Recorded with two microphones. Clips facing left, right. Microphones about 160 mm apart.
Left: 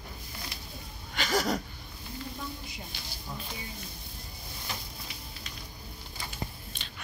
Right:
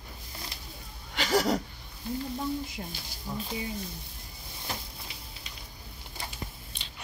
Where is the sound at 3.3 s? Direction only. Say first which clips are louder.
Right 6 dB; 10° right (ahead or behind).